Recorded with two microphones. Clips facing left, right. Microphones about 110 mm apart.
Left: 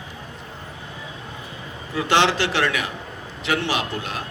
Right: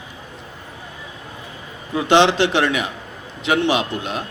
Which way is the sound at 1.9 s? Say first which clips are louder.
Right 5 dB; 20° right (ahead or behind).